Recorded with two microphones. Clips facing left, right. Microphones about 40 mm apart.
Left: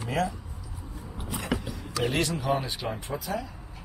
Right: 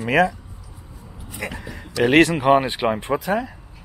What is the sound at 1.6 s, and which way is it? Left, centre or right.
Speech, right.